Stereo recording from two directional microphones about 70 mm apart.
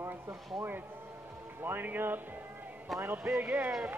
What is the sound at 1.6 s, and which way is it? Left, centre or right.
A man's voice, right.